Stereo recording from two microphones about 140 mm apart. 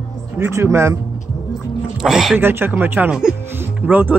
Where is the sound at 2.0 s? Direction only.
Centre (ahead or behind).